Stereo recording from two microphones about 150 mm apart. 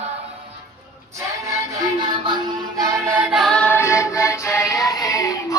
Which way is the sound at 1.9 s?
30° right (ahead or behind).